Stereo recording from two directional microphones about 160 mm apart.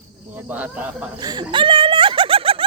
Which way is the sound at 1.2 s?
25° right (ahead or behind).